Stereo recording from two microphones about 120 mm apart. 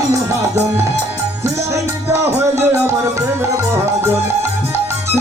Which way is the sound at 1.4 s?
25° right (ahead or behind).